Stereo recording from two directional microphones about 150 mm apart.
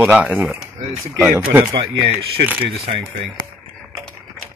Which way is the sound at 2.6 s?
40° right (ahead or behind).